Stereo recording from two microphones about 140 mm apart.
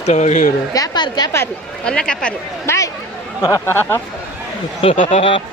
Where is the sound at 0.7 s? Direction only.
30° left (ahead or behind).